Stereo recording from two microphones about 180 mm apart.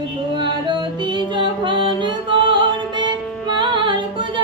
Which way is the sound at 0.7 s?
25° right (ahead or behind).